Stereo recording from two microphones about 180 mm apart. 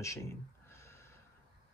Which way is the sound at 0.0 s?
15° left (ahead or behind).